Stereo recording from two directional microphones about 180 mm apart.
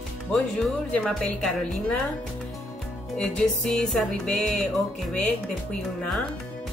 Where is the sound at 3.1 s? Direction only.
5° left (ahead or behind).